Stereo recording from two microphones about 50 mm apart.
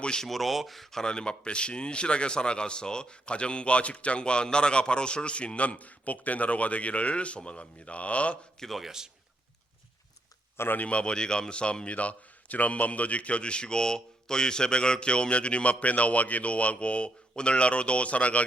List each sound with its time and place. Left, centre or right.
0.0 s speech: centre
0.3 s speech: centre; by 8.4 s left
8.5 s a man's voice: centre
8.8 s a man's voice: centre
10.8 s speech: left